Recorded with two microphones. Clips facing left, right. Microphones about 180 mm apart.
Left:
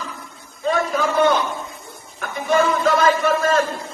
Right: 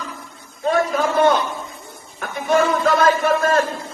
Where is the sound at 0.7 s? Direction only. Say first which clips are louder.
Right 2 dB; 55° right (ahead or behind).